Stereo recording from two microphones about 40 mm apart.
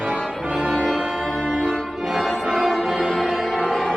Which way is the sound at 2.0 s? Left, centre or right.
Centre.